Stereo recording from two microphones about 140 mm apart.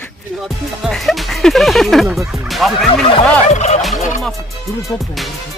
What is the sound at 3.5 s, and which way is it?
Fowl, 55° left (ahead or behind).